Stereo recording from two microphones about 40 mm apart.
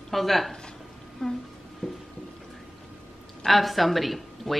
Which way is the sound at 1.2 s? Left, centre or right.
Centre.